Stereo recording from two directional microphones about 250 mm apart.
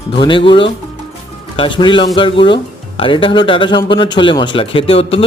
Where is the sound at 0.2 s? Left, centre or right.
Centre.